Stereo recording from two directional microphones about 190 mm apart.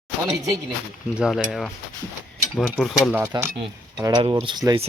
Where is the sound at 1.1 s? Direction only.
5° right (ahead or behind).